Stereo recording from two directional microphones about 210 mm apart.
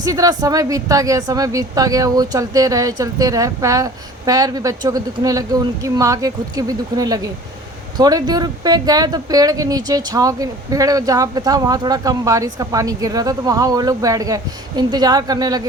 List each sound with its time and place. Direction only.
0.0 s speech: 15° right (ahead or behind)